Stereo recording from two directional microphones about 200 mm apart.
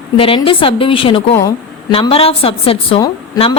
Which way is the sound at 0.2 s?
25° left (ahead or behind).